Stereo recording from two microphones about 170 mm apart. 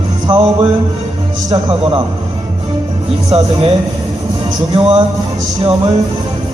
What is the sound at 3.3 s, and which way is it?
Speech, 35° right (ahead or behind).